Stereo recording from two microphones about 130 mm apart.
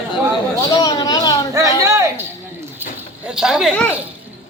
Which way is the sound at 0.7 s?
30° left (ahead or behind).